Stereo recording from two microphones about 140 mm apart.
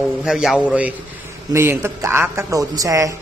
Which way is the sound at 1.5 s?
20° right (ahead or behind).